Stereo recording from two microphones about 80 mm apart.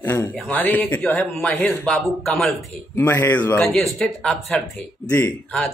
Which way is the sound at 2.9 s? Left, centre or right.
Left.